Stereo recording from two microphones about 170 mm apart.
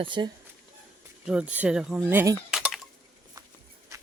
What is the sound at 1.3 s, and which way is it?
Speech, 5° right (ahead or behind).